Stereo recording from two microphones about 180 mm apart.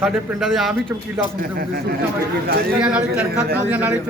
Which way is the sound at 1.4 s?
55° right (ahead or behind).